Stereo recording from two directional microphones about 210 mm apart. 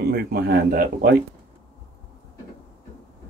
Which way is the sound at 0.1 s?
45° right (ahead or behind).